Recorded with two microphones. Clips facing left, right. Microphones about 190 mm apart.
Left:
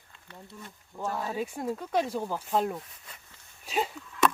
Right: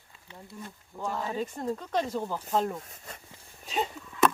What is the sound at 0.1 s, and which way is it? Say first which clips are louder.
Wild animals: even; 5° right (ahead or behind).